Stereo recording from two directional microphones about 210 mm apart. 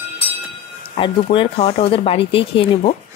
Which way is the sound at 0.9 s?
25° left (ahead or behind).